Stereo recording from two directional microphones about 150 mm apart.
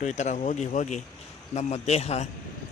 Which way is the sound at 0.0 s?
50° left (ahead or behind).